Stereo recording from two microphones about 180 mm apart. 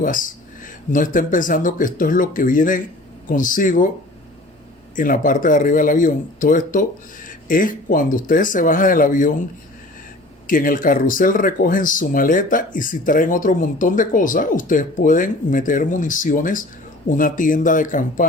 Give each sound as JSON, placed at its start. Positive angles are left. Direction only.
{"t": 0.0, "sound": "speech", "side_deg": 50}
{"t": 4.9, "sound": "speech", "side_deg": 50}
{"t": 10.4, "sound": "speech", "side_deg": 50}